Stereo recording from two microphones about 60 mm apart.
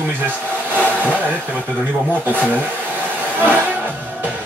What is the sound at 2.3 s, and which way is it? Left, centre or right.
Speech, left.